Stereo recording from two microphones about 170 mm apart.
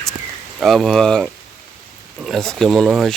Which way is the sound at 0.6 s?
Centre (ahead or behind).